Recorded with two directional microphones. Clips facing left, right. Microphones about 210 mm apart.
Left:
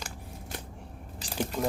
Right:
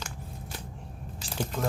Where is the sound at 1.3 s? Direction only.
15° left (ahead or behind).